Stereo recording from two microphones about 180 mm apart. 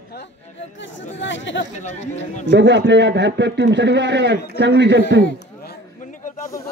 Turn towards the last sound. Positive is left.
turn(degrees=45)  # may be behind; listen again after turning